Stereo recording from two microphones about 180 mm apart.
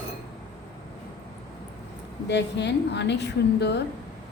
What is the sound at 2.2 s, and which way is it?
A woman's voice, 70° left (ahead or behind).